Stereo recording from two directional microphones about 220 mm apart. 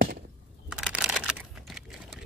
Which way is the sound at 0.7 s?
Centre (ahead or behind).